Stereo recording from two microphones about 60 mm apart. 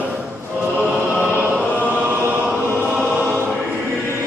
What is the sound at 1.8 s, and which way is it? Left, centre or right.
Chant, right.